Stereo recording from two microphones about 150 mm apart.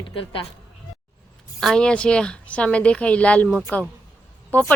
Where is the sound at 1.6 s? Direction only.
5° left (ahead or behind).